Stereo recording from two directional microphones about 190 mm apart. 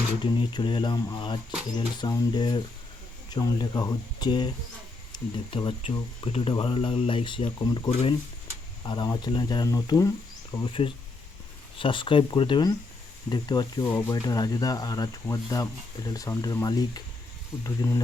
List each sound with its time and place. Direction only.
0.2 s speech: 25° left (ahead or behind)